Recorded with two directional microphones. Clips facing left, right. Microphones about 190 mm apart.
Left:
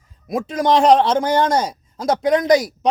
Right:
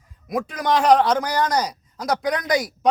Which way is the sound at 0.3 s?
25° left (ahead or behind).